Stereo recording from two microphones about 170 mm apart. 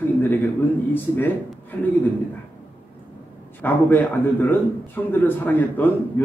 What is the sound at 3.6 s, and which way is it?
A man's voice, 10° left (ahead or behind).